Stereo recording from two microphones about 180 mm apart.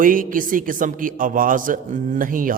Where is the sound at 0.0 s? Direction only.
50° right (ahead or behind).